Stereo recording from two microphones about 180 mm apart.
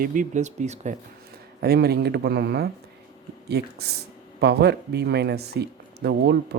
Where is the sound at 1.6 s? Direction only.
60° right (ahead or behind).